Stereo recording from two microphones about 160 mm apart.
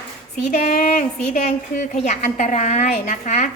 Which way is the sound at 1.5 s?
45° left (ahead or behind).